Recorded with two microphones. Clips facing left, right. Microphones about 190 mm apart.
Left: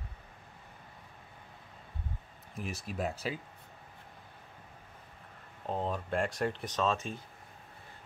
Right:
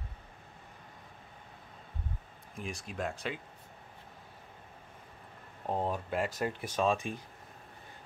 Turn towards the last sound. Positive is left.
turn(degrees=-15)  # may be behind; listen again after turning